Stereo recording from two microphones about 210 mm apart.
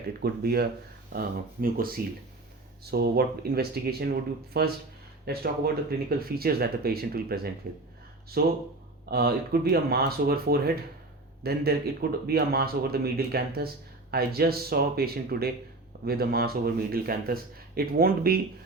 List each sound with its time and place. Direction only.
0.2 s speech: 50° right (ahead or behind)